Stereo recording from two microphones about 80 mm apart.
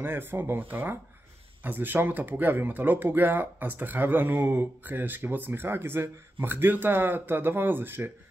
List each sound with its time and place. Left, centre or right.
0.0 s speech: right